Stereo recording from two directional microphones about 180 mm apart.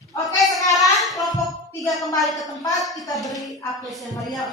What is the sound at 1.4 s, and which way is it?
Music, centre (ahead or behind).